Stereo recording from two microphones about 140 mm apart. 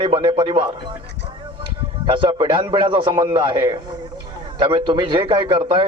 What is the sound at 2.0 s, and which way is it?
A man's voice, 35° right (ahead or behind).